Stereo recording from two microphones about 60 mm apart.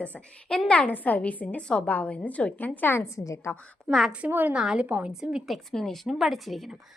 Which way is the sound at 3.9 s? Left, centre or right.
Centre.